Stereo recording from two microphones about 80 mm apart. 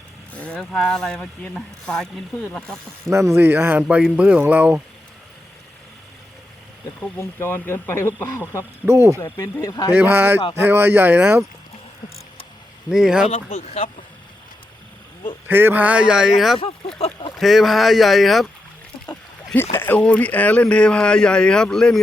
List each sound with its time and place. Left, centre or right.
0.3 s speech: centre
3.1 s speech: right
3.8 s speech: centre
7.2 s speech: left
8.9 s speech: right
9.2 s speech: left
9.9 s speech: right
12.9 s speech: centre
15.4 s speech: right; by 18.4 s centre
19.5 s speech: left; by 22.0 s centre